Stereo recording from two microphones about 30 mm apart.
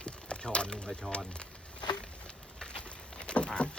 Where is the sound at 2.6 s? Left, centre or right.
Left.